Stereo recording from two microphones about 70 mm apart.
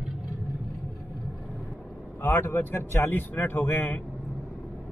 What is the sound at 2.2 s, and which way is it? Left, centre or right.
Speech, left.